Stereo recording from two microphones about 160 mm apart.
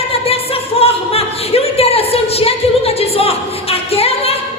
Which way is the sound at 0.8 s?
40° left (ahead or behind).